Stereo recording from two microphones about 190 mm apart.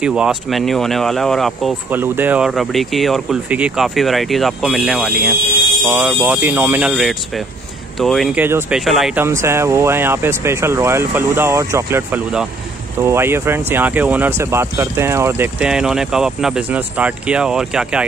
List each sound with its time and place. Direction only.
0.0 s speech: 5° right (ahead or behind)
1.9 s speech: 10° right (ahead or behind)
9.2 s speech: 15° right (ahead or behind)